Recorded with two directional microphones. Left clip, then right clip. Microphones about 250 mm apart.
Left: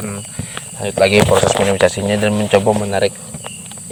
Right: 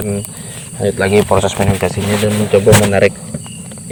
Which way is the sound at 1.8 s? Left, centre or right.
Left.